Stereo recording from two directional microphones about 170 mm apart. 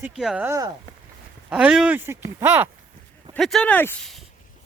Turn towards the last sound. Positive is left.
turn(degrees=10)  # may be behind; listen again after turning